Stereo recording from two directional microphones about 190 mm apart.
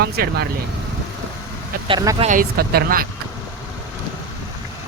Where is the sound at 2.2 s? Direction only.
45° right (ahead or behind).